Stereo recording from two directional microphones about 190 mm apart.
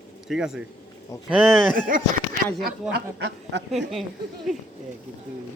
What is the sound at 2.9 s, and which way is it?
Speech, 65° right (ahead or behind).